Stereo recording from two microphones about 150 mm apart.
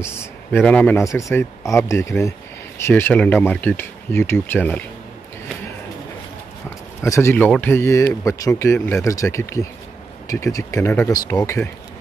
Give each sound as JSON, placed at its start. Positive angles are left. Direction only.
{"t": 0.0, "sound": "speech", "side_deg": 15}
{"t": 7.0, "sound": "speech", "side_deg": 20}